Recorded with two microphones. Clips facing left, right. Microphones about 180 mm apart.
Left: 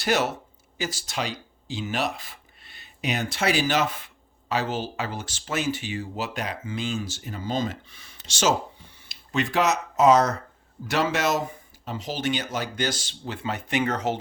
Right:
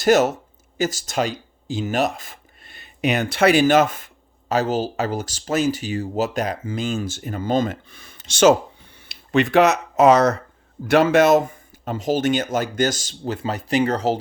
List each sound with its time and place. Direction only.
0.0 s speech: 45° right (ahead or behind); by 10.3 s 70° right (ahead or behind)
10.8 s speech: 55° right (ahead or behind); by 14.2 s 35° right (ahead or behind)